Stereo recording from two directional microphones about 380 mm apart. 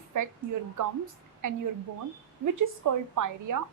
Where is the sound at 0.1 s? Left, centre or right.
Right.